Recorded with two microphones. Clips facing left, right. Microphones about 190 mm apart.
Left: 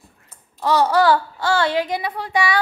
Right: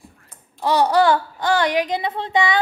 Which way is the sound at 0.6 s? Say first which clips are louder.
Even; 15° right (ahead or behind).